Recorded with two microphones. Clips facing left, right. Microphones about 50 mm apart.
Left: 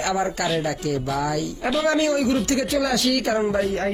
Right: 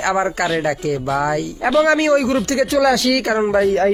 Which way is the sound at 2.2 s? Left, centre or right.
Right.